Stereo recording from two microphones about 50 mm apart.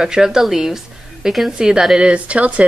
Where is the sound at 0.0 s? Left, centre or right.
Centre.